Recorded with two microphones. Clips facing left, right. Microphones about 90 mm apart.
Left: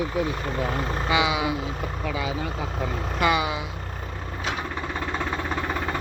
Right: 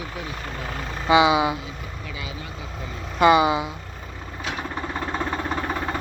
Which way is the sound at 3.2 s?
30° right (ahead or behind).